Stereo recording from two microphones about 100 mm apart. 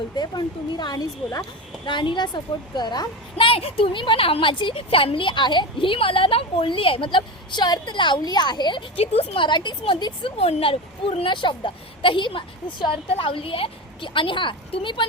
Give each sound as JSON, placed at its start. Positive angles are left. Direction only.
{"t": 0.2, "sound": "a woman's voice", "side_deg": 45}
{"t": 1.8, "sound": "a woman's voice", "side_deg": 55}
{"t": 3.3, "sound": "speech", "side_deg": 65}
{"t": 9.0, "sound": "speech", "side_deg": 75}